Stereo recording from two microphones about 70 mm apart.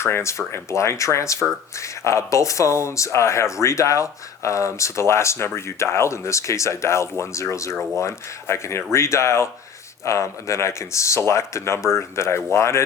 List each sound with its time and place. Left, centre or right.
0.0 s speech: left